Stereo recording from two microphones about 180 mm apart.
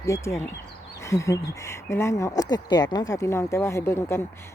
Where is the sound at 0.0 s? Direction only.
15° left (ahead or behind).